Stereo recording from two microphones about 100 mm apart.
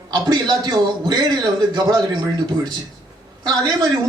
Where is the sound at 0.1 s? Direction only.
45° right (ahead or behind).